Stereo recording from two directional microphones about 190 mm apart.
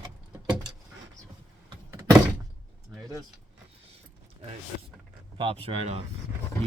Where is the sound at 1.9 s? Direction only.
15° right (ahead or behind).